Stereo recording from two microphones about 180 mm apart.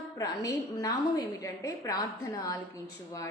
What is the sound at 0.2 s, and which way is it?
A woman's voice, 20° left (ahead or behind).